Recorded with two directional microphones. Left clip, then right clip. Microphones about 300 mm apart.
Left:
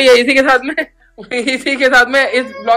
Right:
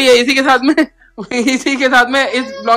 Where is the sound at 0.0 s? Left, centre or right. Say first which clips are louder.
Left 1 dB; centre.